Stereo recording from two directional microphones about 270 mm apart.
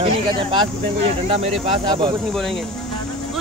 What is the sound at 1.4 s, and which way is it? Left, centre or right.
Speech, centre.